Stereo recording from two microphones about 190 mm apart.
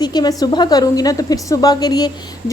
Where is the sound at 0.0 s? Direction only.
20° left (ahead or behind).